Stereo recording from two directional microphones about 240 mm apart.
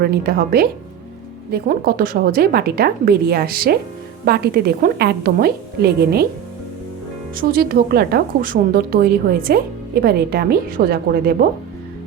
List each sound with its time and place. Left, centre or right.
0.0 s a woman's voice: right
7.3 s a woman's voice: right